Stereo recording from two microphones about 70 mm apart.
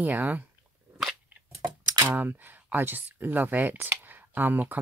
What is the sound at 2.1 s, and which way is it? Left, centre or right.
Speech, right.